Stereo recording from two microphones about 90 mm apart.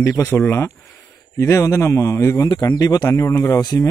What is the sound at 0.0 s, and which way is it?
Speech, 30° left (ahead or behind).